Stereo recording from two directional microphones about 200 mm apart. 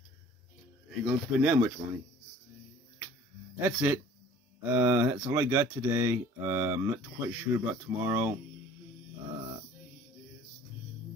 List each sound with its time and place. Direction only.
1.0 s speech: 10° right (ahead or behind)
3.5 s speech: 10° right (ahead or behind)